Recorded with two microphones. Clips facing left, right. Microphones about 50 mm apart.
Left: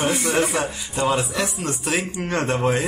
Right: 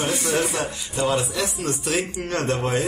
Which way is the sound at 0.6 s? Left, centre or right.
Centre.